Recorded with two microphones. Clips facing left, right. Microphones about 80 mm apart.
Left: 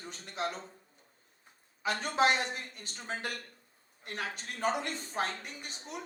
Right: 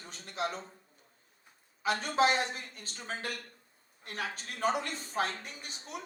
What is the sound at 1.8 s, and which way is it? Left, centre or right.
Speech, left.